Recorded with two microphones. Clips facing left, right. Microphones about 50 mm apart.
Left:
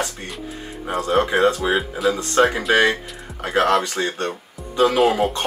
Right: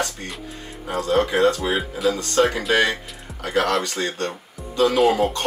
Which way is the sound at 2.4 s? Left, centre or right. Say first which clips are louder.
Left 2 dB; left.